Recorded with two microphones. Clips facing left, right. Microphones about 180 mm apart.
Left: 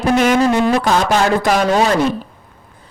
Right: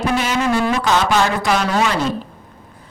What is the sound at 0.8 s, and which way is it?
Speech, 40° left (ahead or behind).